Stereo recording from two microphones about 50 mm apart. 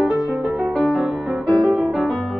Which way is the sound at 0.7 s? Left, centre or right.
Centre.